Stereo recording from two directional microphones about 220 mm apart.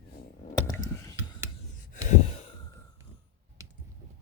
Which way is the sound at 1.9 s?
35° left (ahead or behind).